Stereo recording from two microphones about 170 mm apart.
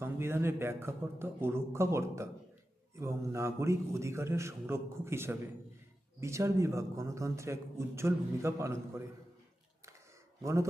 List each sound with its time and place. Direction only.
0.0 s a man's voice: 15° right (ahead or behind)
10.4 s a man's voice: 15° right (ahead or behind)